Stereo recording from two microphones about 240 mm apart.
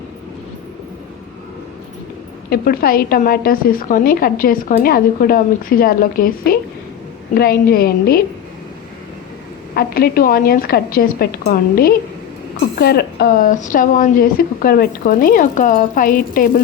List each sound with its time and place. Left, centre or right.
2.5 s a woman's voice: left
9.7 s a woman's voice: left